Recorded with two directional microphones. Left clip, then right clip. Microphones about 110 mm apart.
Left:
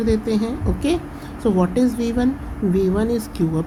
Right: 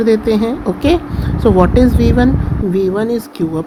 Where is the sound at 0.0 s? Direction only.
35° right (ahead or behind).